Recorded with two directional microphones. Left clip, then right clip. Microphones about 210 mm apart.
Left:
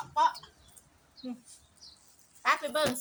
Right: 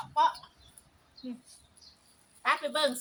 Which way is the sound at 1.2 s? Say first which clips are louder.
Left 1 dB; 50° left (ahead or behind).